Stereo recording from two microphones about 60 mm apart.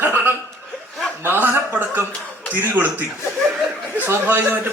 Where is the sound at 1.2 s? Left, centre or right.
Right.